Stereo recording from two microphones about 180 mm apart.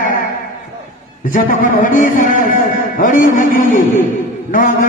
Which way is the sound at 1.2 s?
50° left (ahead or behind).